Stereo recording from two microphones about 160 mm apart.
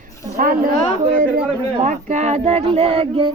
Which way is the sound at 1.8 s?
50° right (ahead or behind).